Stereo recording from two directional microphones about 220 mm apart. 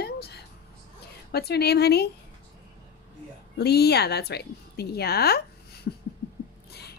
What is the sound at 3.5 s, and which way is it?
A woman's voice, 45° left (ahead or behind).